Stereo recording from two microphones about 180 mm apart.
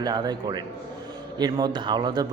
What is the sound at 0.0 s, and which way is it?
A man's voice, 25° right (ahead or behind).